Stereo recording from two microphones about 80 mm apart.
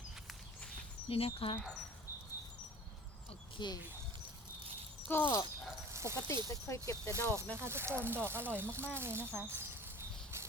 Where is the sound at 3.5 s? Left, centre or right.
Left.